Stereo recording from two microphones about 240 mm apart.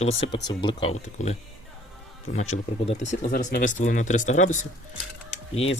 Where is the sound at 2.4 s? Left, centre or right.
Left.